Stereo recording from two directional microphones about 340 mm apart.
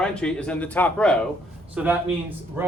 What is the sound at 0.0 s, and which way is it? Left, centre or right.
A man's voice, centre.